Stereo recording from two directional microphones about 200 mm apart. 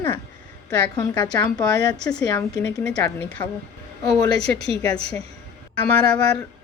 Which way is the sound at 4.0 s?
20° left (ahead or behind).